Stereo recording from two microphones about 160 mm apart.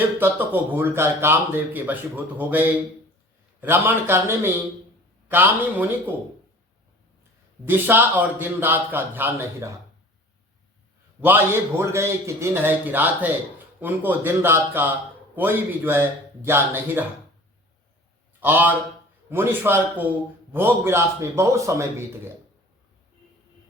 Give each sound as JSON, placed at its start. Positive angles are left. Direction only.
{"t": 0.2, "sound": "speech", "side_deg": -10}
{"t": 7.6, "sound": "speech", "side_deg": -15}
{"t": 11.2, "sound": "speech", "side_deg": -15}
{"t": 18.3, "sound": "a man's voice", "side_deg": -10}